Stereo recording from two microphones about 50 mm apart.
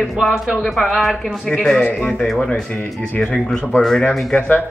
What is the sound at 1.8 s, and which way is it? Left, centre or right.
Speech, left.